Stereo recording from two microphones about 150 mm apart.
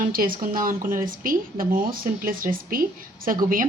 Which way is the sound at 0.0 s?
70° right (ahead or behind).